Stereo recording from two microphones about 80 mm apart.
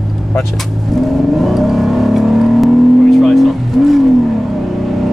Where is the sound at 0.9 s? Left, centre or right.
Centre.